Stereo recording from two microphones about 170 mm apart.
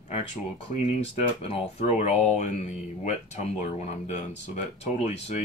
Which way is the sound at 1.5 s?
40° left (ahead or behind).